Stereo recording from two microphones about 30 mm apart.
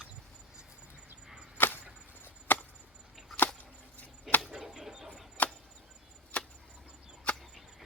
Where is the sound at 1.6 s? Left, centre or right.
Left.